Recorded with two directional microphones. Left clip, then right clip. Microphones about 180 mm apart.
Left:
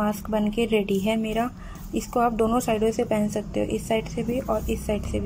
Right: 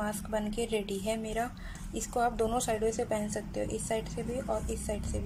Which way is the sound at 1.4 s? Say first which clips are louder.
Left 7 dB; centre (ahead or behind).